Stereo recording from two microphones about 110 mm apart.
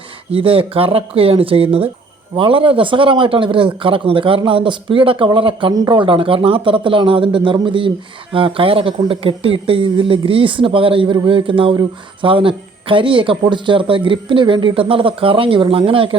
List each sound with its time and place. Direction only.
0.3 s a man's voice: 55° right (ahead or behind)